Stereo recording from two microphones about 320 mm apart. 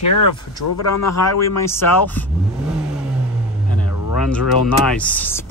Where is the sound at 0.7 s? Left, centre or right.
Left.